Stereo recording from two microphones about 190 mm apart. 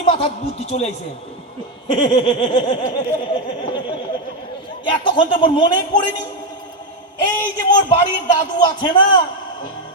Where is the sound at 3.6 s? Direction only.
25° left (ahead or behind).